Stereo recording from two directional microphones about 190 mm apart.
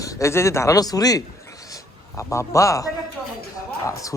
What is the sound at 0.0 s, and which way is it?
Speech, 15° left (ahead or behind).